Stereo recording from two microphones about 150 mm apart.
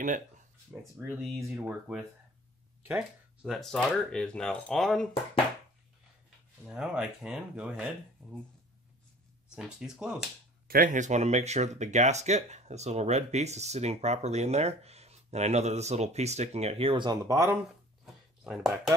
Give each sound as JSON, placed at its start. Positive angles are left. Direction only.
{"t": 0.9, "sound": "speech", "side_deg": -5}
{"t": 6.7, "sound": "speech", "side_deg": -5}
{"t": 9.6, "sound": "speech", "side_deg": -5}
{"t": 10.7, "sound": "speech", "side_deg": -65}
{"t": 18.0, "sound": "a sound", "side_deg": -5}